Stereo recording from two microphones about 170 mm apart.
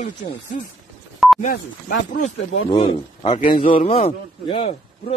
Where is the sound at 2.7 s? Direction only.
30° left (ahead or behind).